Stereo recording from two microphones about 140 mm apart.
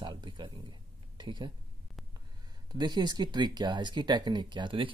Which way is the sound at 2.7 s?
30° right (ahead or behind).